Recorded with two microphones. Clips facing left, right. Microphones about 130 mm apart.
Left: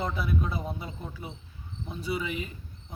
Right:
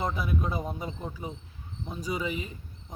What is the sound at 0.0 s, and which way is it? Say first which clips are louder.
Speech: even; 45° right (ahead or behind).